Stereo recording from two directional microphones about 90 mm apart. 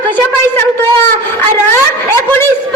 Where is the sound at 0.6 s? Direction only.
25° left (ahead or behind).